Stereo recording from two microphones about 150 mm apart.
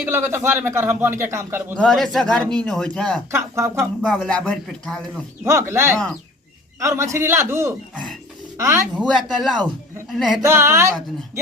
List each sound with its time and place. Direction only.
0.0 s a man's voice: 15° right (ahead or behind)
1.8 s speech: centre (ahead or behind)
3.3 s a man's voice: 15° right (ahead or behind)
3.8 s speech: 5° left (ahead or behind)
5.5 s a man's voice: 15° right (ahead or behind)
9.0 s speech: centre (ahead or behind)
10.4 s a man's voice: 20° right (ahead or behind)